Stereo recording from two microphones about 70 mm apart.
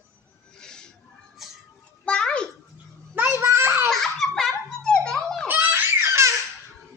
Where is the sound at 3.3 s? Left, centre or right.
Right.